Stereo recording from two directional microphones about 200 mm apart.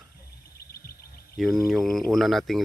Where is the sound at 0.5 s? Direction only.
50° left (ahead or behind).